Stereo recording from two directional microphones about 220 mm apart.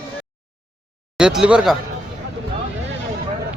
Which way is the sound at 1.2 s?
5° right (ahead or behind).